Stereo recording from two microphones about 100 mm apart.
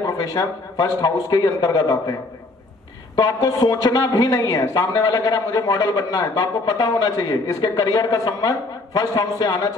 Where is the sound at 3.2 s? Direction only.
40° left (ahead or behind).